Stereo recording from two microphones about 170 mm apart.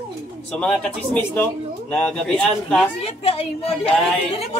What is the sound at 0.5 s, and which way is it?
Speech, 5° left (ahead or behind).